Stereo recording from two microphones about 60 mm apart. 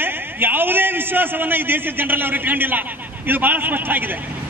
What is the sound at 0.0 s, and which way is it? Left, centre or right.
A man's voice, right.